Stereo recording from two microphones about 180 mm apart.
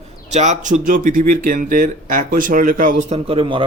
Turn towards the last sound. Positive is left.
turn(degrees=-30)  # may be behind; listen again after turning